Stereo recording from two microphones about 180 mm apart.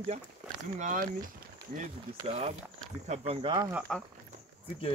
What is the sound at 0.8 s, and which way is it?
Speech, 45° right (ahead or behind).